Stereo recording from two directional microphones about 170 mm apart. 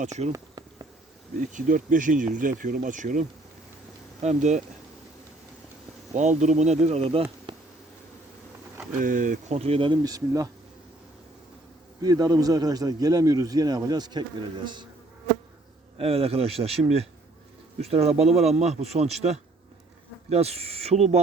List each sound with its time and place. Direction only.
0.0 s speech: 40° right (ahead or behind)
0.3 s insect: 25° right (ahead or behind)
1.4 s speech: 50° right (ahead or behind)
6.1 s speech: 45° right (ahead or behind)
9.0 s speech: 50° right (ahead or behind); by 10.5 s 20° right (ahead or behind)
12.0 s speech: 20° right (ahead or behind)
16.0 s speech: 35° right (ahead or behind)
20.3 s speech: 40° right (ahead or behind)